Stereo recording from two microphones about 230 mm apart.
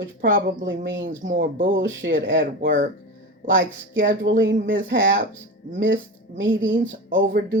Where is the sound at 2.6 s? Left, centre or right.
Right.